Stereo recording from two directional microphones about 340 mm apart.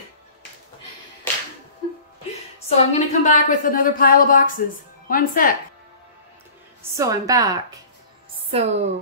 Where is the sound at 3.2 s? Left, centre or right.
Left.